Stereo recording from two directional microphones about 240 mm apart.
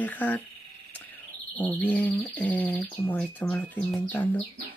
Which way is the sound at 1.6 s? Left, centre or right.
Centre.